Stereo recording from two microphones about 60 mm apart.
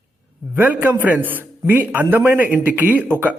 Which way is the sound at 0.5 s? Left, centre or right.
Right.